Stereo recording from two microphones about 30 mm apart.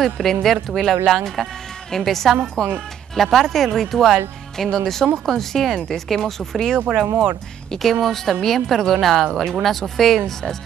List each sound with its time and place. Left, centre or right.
0.0 s speech: centre
7.8 s speech: centre